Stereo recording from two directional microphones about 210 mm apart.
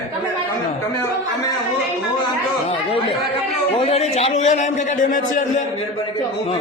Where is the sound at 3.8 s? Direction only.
30° left (ahead or behind).